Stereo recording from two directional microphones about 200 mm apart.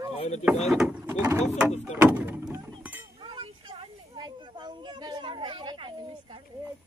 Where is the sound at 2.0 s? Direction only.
10° right (ahead or behind).